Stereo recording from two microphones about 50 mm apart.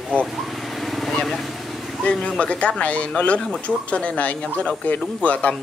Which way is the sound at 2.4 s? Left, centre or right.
Left.